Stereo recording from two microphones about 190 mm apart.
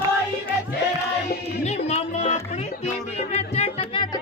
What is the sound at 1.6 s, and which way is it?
Music, 35° left (ahead or behind).